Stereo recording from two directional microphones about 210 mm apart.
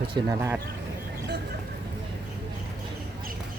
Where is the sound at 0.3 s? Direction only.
10° right (ahead or behind).